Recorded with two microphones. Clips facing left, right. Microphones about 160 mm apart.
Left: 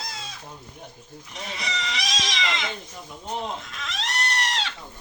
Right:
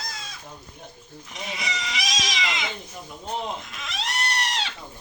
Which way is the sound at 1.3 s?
10° right (ahead or behind).